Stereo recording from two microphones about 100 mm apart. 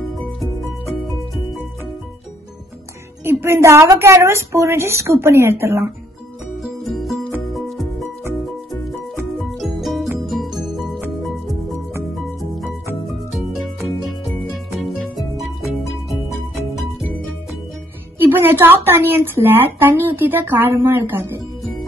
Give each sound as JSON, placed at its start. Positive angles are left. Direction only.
{"t": 3.3, "sound": "speech", "side_deg": -25}
{"t": 6.6, "sound": "music", "side_deg": 0}
{"t": 9.1, "sound": "music", "side_deg": 0}
{"t": 13.3, "sound": "music", "side_deg": 0}
{"t": 15.1, "sound": "music", "side_deg": 0}
{"t": 18.3, "sound": "speech", "side_deg": -20}